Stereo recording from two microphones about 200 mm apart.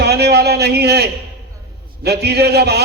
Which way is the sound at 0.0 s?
55° right (ahead or behind).